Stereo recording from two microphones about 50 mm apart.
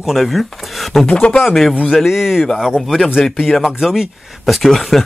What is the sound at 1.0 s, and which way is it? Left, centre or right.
Speech, left.